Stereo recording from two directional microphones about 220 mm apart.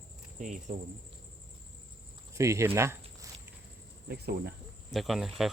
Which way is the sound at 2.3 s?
15° right (ahead or behind).